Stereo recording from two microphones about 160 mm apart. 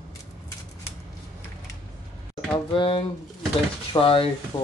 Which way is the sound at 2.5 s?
35° left (ahead or behind).